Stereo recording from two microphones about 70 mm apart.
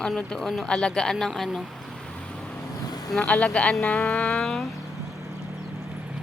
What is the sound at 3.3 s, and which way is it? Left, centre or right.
Speech, centre.